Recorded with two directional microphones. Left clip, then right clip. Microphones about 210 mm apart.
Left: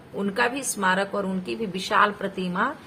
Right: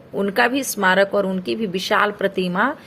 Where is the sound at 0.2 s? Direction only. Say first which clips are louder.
Right 6 dB; 25° right (ahead or behind).